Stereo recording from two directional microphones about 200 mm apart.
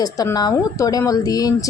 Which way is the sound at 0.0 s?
20° left (ahead or behind).